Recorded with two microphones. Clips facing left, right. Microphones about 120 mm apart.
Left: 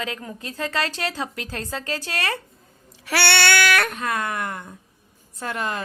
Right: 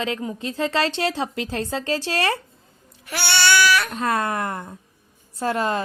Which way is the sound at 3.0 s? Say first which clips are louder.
Left 2 dB; 80° left.